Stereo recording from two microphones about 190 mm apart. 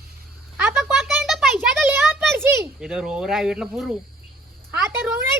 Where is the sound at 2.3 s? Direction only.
10° right (ahead or behind).